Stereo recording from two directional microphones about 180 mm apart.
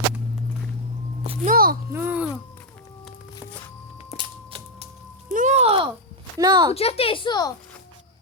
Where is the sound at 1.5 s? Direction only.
55° right (ahead or behind).